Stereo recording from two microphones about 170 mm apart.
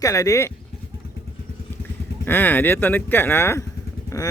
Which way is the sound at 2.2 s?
10° left (ahead or behind).